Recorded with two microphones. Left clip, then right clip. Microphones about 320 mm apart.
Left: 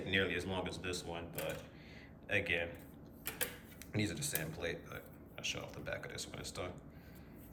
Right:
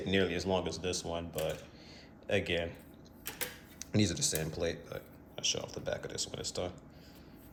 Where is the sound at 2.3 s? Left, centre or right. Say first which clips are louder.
Right 3 dB; centre.